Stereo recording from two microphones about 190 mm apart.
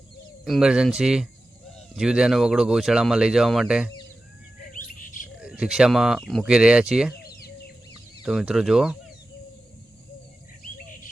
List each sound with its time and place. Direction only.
0.4 s speech: centre (ahead or behind)
4.7 s bird: 45° left (ahead or behind)
5.4 s speech: 5° right (ahead or behind)
8.2 s speech: centre (ahead or behind)